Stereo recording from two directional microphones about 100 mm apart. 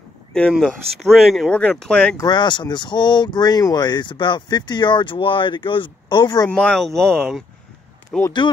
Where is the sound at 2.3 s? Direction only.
50° left (ahead or behind).